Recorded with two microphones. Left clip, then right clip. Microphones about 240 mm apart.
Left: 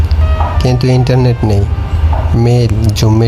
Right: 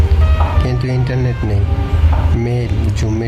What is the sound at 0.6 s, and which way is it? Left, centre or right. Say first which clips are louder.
Speech: left 8 dB; left.